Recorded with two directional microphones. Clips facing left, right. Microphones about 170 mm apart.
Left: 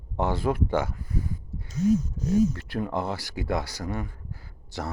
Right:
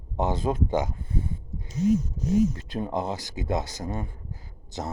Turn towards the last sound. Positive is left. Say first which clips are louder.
# even
turn(degrees=-20)  # may be behind; listen again after turning